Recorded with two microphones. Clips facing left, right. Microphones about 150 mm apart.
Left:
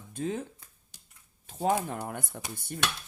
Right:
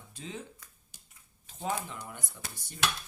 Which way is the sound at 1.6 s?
50° left (ahead or behind).